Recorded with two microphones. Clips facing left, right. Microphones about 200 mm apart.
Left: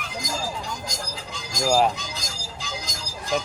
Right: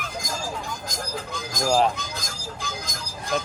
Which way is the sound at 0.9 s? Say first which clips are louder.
Right 3 dB; 55° right (ahead or behind).